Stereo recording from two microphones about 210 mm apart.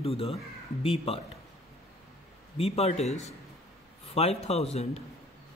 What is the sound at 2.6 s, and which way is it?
A man's voice, 30° left (ahead or behind).